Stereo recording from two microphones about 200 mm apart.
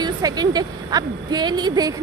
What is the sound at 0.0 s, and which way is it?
A woman's voice, 20° right (ahead or behind).